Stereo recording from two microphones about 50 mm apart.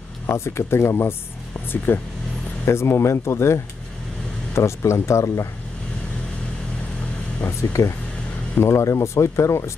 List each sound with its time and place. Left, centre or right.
0.3 s speech: left
1.9 s speech: left
2.6 s speech: left
7.6 s speech: left
8.6 s speech: left